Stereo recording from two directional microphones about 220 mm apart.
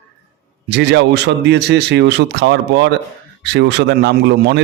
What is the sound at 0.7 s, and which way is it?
Speech, 50° right (ahead or behind).